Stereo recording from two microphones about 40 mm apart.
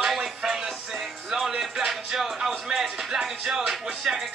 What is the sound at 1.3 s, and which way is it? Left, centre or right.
Speech, centre.